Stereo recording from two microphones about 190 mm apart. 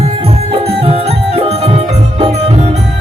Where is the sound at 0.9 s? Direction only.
30° right (ahead or behind).